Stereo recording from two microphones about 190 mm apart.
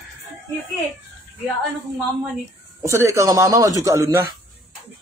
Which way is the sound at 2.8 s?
15° right (ahead or behind).